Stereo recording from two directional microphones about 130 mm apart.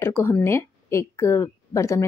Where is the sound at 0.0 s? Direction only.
20° left (ahead or behind).